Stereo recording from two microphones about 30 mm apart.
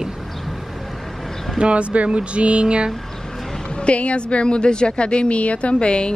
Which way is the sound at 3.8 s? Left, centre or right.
Left.